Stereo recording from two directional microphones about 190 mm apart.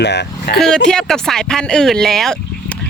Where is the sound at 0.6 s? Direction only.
5° left (ahead or behind).